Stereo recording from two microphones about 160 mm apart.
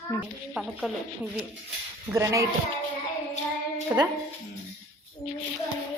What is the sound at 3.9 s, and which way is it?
Speech, 15° right (ahead or behind).